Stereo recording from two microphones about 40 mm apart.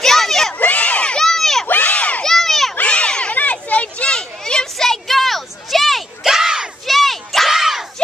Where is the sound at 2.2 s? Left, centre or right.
Centre.